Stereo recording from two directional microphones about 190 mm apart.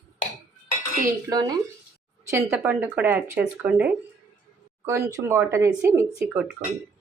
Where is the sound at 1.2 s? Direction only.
20° right (ahead or behind).